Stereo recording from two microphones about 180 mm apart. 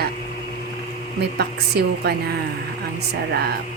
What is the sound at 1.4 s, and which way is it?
Speech, 65° right (ahead or behind).